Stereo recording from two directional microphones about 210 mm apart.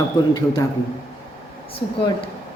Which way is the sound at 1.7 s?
25° left (ahead or behind).